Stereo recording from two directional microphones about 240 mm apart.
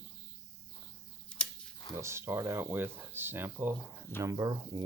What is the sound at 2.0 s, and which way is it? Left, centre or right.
Speech, centre.